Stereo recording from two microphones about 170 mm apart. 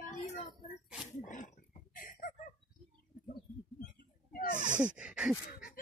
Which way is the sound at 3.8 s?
60° left (ahead or behind).